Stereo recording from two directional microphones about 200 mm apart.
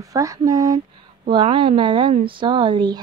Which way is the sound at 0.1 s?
15° right (ahead or behind).